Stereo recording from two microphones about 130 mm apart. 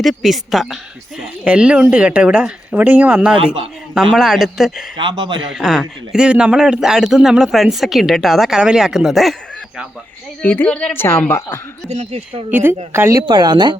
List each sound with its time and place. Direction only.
0.0 s speech: centre (ahead or behind)
4.9 s speech: 35° right (ahead or behind)
5.5 s speech: centre (ahead or behind)
10.4 s a woman's voice: 10° left (ahead or behind)
12.5 s speech: 15° right (ahead or behind); by 13.7 s 35° right (ahead or behind)